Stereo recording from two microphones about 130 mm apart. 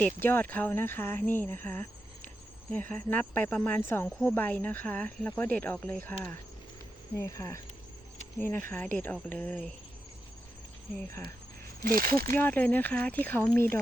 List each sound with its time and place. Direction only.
0.0 s speech: 15° left (ahead or behind)
1.3 s cricket: 15° left (ahead or behind)
2.9 s speech: 15° left (ahead or behind)
11.9 s speech: 90° right
12.3 s speech: 15° left (ahead or behind)